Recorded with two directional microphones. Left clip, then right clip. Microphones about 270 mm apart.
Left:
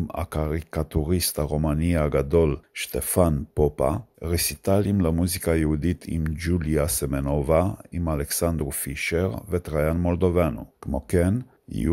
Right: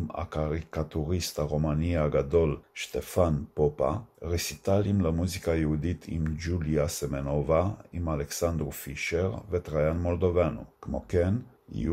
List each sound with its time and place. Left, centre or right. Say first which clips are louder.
0.1 s speech: left 3 dB; left